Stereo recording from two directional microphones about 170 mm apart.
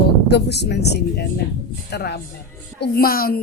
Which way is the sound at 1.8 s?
75° left (ahead or behind).